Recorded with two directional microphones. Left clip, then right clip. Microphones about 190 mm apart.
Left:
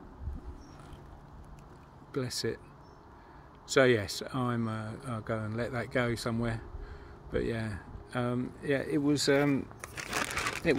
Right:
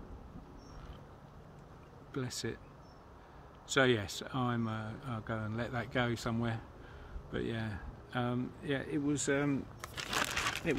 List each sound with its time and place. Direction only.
2.1 s speech: 15° left (ahead or behind)
3.7 s speech: 15° left (ahead or behind)